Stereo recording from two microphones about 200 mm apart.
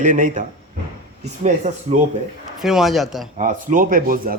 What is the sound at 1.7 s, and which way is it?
Speech, 35° right (ahead or behind).